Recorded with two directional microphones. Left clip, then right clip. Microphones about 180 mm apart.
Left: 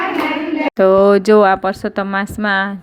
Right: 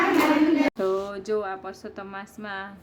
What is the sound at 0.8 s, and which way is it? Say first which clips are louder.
Speech: left 17 dB; 40° left (ahead or behind).